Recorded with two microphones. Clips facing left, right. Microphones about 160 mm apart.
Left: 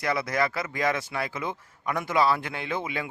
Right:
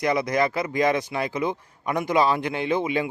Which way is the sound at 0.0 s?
20° right (ahead or behind).